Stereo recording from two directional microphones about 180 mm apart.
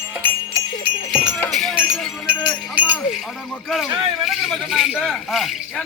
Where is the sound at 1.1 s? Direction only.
5° right (ahead or behind).